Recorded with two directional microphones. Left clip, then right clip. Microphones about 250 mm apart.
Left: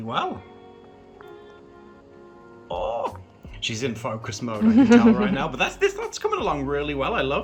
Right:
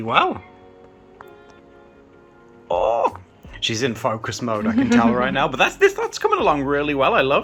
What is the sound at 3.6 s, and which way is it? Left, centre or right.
Speech, centre.